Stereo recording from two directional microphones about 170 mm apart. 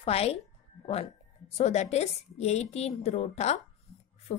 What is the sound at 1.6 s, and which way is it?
Speech, 40° left (ahead or behind).